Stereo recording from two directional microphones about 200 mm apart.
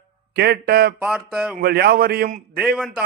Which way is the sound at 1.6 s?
50° right (ahead or behind).